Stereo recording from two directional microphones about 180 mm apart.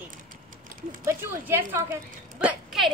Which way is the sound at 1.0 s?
15° right (ahead or behind).